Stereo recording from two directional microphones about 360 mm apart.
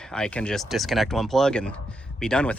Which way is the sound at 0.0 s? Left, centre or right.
Centre.